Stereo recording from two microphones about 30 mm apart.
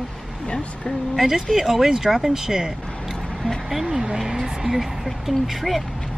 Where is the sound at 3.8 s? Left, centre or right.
Centre.